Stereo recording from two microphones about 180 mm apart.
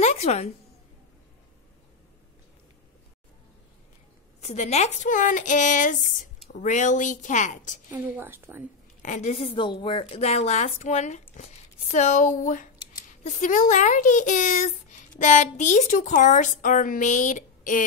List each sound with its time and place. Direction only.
0.0 s a sound: 35° left (ahead or behind)
4.4 s speech: 40° left (ahead or behind)
7.9 s a woman's voice: 10° right (ahead or behind)
9.0 s a woman's voice: 40° left (ahead or behind)